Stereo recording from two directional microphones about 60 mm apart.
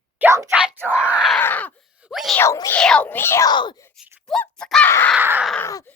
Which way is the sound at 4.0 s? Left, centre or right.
Centre.